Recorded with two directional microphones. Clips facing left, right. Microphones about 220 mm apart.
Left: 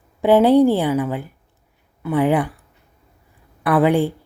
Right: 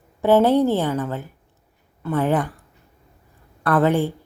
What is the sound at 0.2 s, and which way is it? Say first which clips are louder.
A woman's voice: left 3 dB; 15° left (ahead or behind).